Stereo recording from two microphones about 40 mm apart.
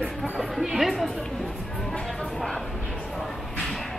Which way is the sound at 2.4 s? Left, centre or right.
Centre.